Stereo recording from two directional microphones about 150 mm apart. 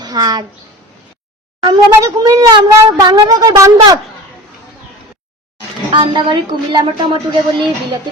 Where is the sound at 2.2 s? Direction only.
20° right (ahead or behind).